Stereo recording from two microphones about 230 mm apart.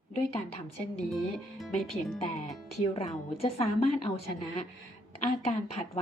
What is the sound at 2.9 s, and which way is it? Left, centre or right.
A woman's voice, left.